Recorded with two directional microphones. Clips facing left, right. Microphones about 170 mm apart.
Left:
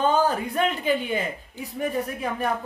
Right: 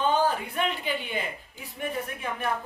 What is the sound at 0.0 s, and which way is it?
Speech, 40° left (ahead or behind).